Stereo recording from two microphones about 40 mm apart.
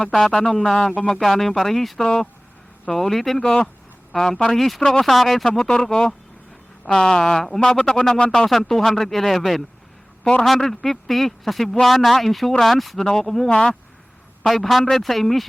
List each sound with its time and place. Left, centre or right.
0.0 s speech: centre
1.2 s speech: centre
2.0 s speech: centre
3.4 s speech: left
4.1 s speech: centre
4.8 s speech: centre
5.0 s speech: centre
5.5 s speech: left
8.4 s speech: centre
13.5 s speech: left
14.4 s speech: centre